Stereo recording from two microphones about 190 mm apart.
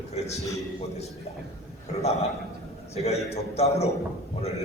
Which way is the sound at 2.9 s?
35° left (ahead or behind).